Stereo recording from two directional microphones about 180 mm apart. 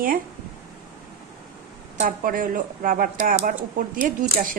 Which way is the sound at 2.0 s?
50° right (ahead or behind).